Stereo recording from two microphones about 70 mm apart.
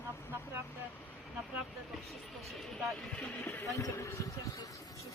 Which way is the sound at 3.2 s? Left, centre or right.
Left.